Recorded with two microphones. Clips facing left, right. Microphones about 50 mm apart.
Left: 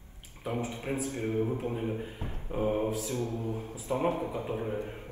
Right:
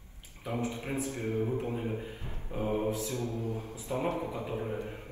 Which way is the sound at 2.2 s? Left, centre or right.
Left.